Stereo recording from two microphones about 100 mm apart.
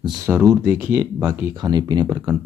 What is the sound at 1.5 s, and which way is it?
Speech, 45° right (ahead or behind).